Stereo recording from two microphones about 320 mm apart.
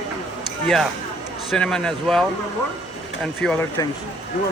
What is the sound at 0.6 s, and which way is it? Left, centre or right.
Speech, centre.